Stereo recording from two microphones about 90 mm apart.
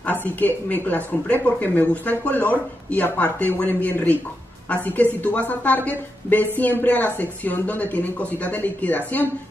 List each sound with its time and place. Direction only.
0.0 s speech: 20° left (ahead or behind)
5.2 s speech: 15° left (ahead or behind)